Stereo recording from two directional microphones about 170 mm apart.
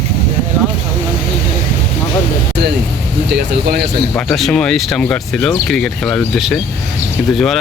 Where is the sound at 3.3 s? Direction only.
70° right (ahead or behind).